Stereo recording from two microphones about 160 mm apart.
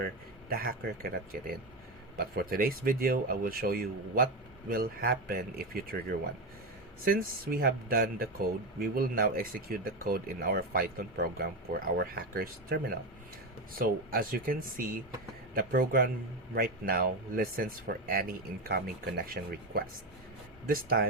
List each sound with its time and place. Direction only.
0.5 s speech: 65° right (ahead or behind)